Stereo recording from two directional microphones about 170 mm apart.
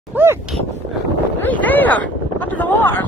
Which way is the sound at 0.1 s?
10° right (ahead or behind).